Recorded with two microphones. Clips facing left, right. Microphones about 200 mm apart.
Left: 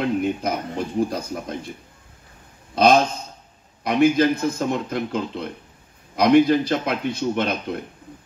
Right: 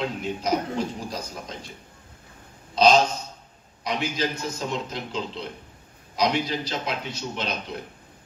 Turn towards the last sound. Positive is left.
turn(degrees=55)  # may be behind; listen again after turning